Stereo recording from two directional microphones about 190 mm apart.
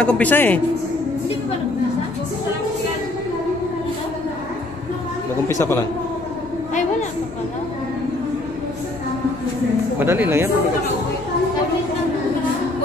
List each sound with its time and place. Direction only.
0.0 s a man's voice: 5° left (ahead or behind)
5.5 s a man's voice: 15° left (ahead or behind)
9.9 s speech: 10° right (ahead or behind)